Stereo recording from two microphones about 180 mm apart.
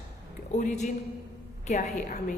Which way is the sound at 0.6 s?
40° left (ahead or behind).